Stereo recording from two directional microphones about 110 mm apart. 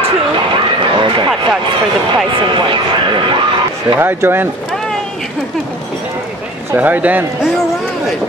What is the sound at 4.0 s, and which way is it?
Speech, 20° right (ahead or behind).